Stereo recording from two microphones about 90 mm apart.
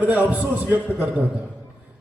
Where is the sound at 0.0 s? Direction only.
15° right (ahead or behind).